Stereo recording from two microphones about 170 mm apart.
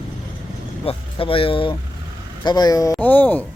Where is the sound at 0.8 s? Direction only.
30° left (ahead or behind).